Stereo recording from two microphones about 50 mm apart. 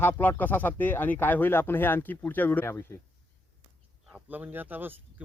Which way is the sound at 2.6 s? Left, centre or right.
Left.